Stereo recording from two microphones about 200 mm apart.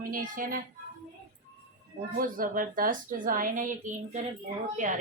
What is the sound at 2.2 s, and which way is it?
A woman's voice, 45° right (ahead or behind).